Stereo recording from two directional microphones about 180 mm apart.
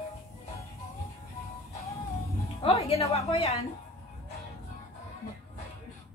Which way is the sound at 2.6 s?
35° left (ahead or behind).